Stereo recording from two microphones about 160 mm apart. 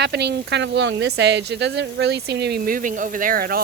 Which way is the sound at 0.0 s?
90° right.